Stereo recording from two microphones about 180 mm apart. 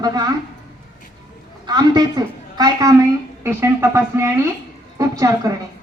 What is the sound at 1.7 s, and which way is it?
A woman's voice, 20° right (ahead or behind).